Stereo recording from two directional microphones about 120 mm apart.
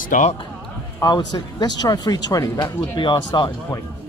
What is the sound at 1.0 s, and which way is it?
Speech, 35° left (ahead or behind).